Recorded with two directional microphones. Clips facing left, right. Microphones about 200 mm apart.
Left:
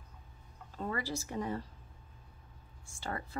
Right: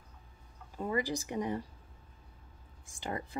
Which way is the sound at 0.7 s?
15° right (ahead or behind).